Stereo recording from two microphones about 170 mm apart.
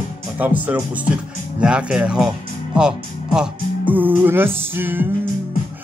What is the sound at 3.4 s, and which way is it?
Music, 5° right (ahead or behind).